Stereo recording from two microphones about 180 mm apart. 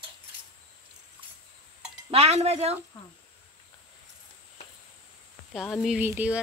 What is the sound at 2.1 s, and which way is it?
Speech, 35° right (ahead or behind).